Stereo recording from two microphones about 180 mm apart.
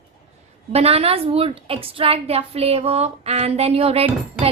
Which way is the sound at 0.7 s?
35° right (ahead or behind).